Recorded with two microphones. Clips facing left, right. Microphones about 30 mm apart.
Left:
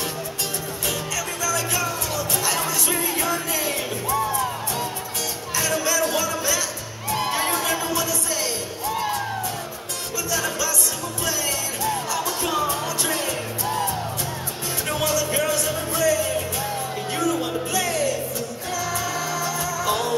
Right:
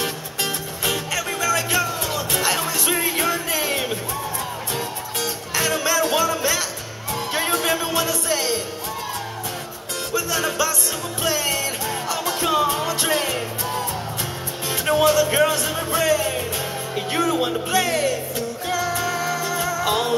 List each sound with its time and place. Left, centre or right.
0.8 s music: right
7.9 s music: right
10.1 s music: right
14.9 s music: right